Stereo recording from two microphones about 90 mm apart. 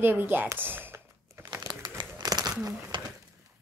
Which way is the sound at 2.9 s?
60° right (ahead or behind).